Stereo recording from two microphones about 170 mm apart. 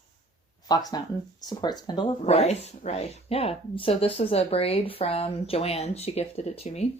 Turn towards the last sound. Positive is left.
turn(degrees=40)  # may be behind; listen again after turning